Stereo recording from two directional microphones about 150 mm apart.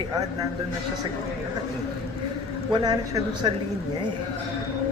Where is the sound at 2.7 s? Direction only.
25° right (ahead or behind).